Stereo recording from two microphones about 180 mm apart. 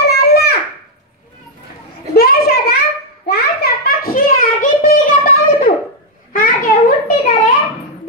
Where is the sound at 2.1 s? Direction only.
60° left (ahead or behind).